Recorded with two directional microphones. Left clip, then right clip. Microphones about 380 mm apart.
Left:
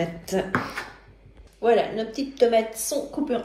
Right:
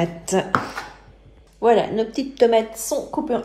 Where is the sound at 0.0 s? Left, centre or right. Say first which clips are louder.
Right 5 dB; centre.